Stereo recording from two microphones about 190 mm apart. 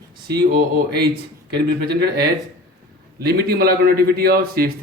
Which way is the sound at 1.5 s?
60° right (ahead or behind).